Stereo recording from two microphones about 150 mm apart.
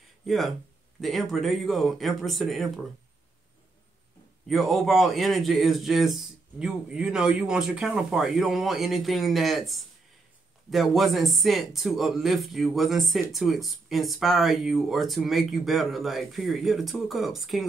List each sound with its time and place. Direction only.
0.3 s speech: centre (ahead or behind)
4.5 s speech: centre (ahead or behind)